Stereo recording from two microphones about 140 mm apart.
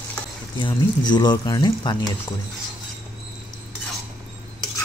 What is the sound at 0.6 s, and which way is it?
Speech, 30° left (ahead or behind).